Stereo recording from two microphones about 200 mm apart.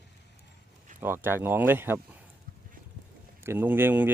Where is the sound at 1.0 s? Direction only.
10° right (ahead or behind).